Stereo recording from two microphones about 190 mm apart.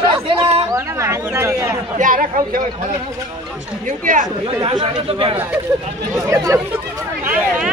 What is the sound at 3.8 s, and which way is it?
Speech, 45° right (ahead or behind).